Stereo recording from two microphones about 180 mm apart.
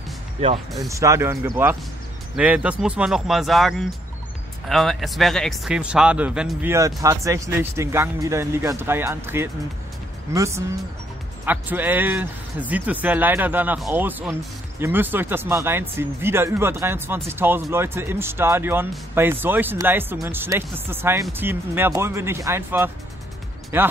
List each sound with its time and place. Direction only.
0.7 s speech: 15° right (ahead or behind)